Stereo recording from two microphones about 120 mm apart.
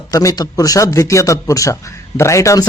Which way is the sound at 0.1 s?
30° left (ahead or behind).